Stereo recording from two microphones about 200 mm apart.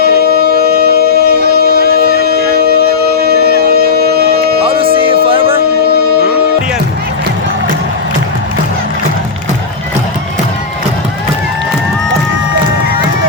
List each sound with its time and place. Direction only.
0.0 s music: 50° right (ahead or behind)
4.6 s music: 25° right (ahead or behind)